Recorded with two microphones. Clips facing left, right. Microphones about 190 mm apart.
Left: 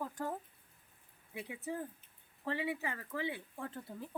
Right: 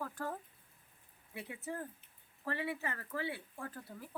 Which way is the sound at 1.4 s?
15° left (ahead or behind).